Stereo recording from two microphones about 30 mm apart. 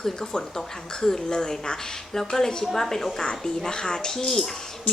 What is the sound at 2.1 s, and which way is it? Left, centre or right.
Speech, centre.